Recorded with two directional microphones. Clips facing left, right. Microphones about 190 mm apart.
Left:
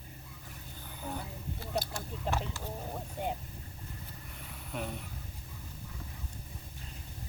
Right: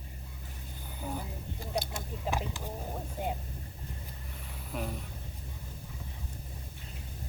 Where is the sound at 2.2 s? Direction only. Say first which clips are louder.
Right 1 dB; 15° right (ahead or behind).